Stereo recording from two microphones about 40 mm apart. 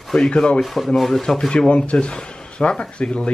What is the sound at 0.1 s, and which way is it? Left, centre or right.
Speech, centre.